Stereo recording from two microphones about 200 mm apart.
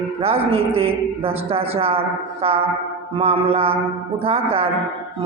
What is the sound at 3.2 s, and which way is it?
A man's voice, 30° right (ahead or behind).